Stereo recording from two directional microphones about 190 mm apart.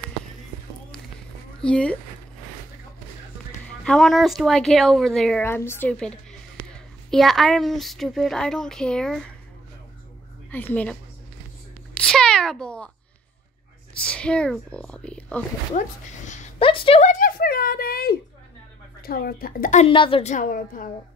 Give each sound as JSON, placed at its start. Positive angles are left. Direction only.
{"t": 1.6, "sound": "a woman's voice", "side_deg": 5}
{"t": 3.8, "sound": "a woman's voice", "side_deg": 0}
{"t": 10.5, "sound": "a woman's voice", "side_deg": 10}
{"t": 11.9, "sound": "cat", "side_deg": 5}
{"t": 14.0, "sound": "a woman's voice", "side_deg": 5}
{"t": 16.3, "sound": "a woman's voice", "side_deg": 35}
{"t": 19.9, "sound": "a woman's voice", "side_deg": 25}
{"t": 20.3, "sound": "a woman's voice", "side_deg": 45}